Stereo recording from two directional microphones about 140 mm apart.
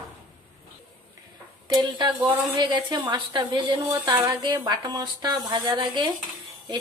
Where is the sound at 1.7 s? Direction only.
30° right (ahead or behind).